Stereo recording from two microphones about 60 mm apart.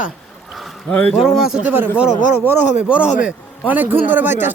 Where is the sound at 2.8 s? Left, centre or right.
Centre.